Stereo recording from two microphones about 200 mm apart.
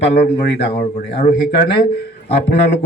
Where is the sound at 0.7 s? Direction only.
35° left (ahead or behind).